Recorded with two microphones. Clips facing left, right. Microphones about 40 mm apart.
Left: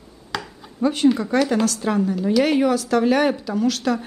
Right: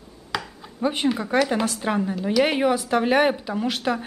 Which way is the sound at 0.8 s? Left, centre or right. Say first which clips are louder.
Left 5 dB; right.